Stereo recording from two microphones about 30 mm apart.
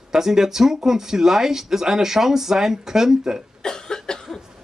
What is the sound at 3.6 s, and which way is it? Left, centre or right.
Cough, left.